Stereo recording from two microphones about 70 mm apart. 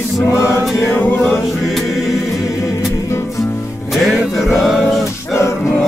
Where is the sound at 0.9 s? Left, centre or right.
Left.